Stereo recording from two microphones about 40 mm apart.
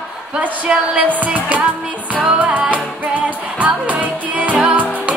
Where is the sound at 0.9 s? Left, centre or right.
Right.